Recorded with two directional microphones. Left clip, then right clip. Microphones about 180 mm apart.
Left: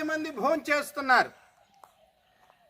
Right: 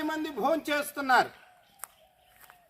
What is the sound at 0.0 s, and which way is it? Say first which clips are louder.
Speech: left 1 dB; 20° left (ahead or behind).